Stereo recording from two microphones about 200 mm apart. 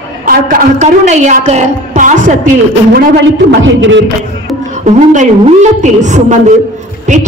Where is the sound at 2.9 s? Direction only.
60° right (ahead or behind).